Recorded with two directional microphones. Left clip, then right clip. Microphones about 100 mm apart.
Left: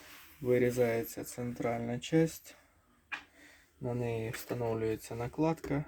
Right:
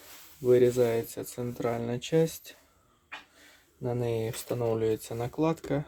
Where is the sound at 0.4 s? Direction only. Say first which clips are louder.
Right 6 dB; 30° right (ahead or behind).